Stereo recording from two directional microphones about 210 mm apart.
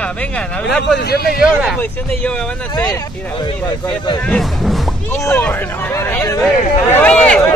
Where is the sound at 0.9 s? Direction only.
50° left (ahead or behind).